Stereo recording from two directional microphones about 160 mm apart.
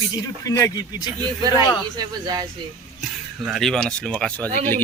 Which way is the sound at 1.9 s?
25° right (ahead or behind).